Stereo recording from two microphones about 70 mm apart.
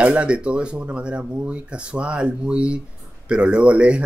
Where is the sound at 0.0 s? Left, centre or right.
Centre.